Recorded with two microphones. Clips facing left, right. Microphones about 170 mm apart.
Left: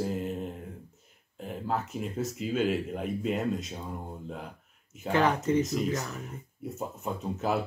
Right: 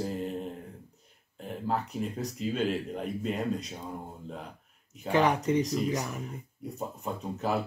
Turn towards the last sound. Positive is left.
turn(degrees=0)  # may be behind; listen again after turning